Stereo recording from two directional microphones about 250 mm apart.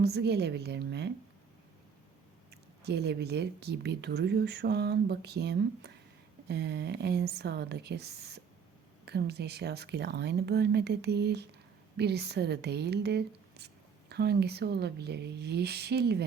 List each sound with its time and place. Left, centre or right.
0.0 s speech: right
2.8 s speech: right